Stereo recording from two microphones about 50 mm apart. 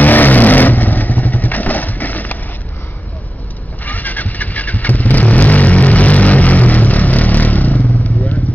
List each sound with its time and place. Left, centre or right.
0.0 s vehicle: left
3.8 s vehicle: left